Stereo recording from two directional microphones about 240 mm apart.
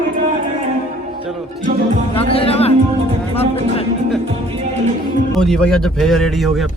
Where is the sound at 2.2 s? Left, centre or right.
Left.